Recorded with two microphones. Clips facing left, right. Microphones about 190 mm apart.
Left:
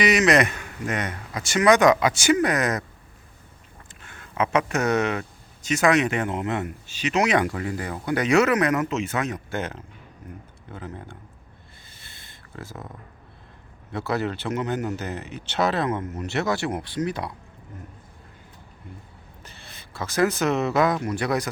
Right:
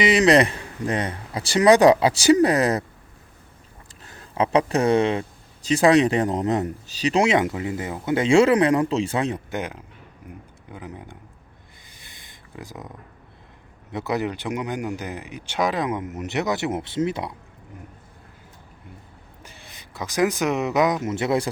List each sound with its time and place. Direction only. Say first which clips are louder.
0.0 s speech: right 3 dB; 30° right (ahead or behind)
4.0 s speech: right 2 dB; 35° right (ahead or behind)
9.5 s speech: even; 15° right (ahead or behind)
11.9 s a sound: right 2 dB; 15° right (ahead or behind)
13.9 s speech: right 1 dB; 20° right (ahead or behind)
19.4 s speech: right 1 dB; 15° right (ahead or behind)